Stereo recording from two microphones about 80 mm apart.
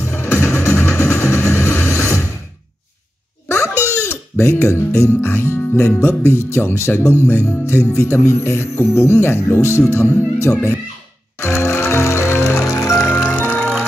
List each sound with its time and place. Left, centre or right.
0.4 s music: left
1.9 s a sound: left
3.4 s music: left
5.8 s speech: left
11.4 s music: left
13.0 s music: left